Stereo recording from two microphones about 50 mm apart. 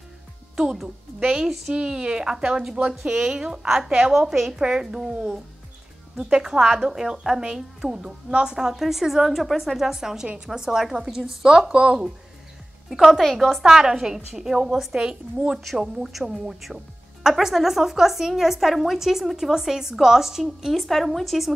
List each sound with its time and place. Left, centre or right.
0.6 s a woman's voice: centre
6.1 s a woman's voice: centre
12.9 s speech: centre
13.7 s a woman's voice: centre